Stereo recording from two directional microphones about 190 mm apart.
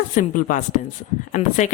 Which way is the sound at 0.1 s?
45° left (ahead or behind).